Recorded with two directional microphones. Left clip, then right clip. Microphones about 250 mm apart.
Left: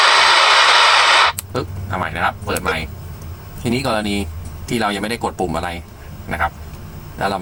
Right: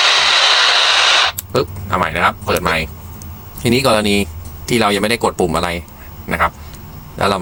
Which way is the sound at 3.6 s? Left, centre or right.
Right.